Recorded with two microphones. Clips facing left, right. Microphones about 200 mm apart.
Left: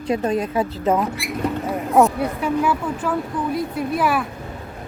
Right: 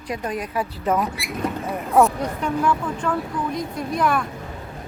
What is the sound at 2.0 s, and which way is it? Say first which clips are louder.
Speech: left 2 dB; 5° left (ahead or behind).